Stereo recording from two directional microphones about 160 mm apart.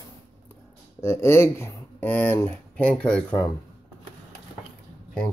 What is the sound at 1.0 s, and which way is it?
Speech, 15° left (ahead or behind).